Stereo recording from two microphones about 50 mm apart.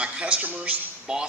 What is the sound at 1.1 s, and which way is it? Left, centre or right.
Speech, centre.